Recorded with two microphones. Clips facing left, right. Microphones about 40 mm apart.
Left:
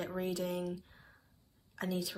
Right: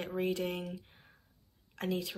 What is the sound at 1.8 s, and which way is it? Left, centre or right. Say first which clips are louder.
Speech: right 2 dB; right.